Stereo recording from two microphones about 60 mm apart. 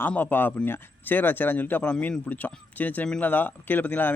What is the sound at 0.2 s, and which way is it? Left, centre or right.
Speech, left.